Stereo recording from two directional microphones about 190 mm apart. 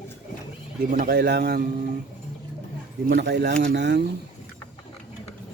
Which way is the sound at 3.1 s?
60° right (ahead or behind).